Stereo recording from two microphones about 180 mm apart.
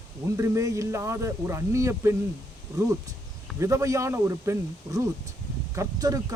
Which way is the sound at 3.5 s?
15° right (ahead or behind).